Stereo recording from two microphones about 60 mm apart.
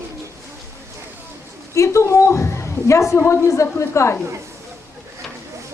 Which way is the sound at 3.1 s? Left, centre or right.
Left.